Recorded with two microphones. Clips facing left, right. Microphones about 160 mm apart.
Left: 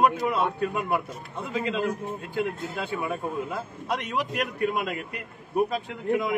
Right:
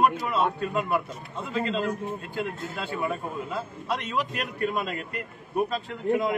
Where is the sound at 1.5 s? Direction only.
15° left (ahead or behind).